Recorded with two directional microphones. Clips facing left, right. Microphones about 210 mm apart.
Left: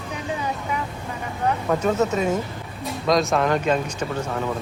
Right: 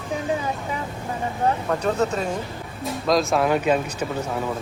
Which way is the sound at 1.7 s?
5° left (ahead or behind).